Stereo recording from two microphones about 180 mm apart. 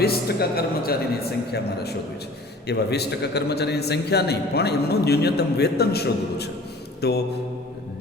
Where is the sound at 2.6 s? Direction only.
65° left (ahead or behind).